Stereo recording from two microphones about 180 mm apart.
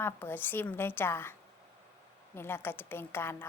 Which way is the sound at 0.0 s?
10° left (ahead or behind).